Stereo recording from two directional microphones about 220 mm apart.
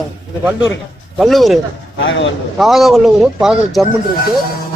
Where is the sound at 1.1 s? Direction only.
Centre (ahead or behind).